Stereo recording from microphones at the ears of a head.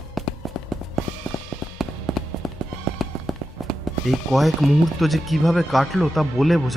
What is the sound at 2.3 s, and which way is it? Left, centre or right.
Music, right.